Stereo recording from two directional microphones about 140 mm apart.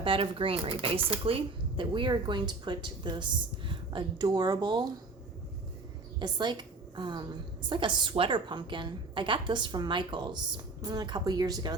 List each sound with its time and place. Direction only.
0.0 s a woman's voice: 40° right (ahead or behind)
6.1 s a woman's voice: 30° right (ahead or behind)